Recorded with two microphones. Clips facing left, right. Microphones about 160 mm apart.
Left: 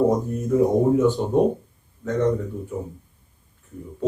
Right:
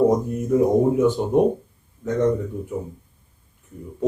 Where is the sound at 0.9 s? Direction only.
15° right (ahead or behind).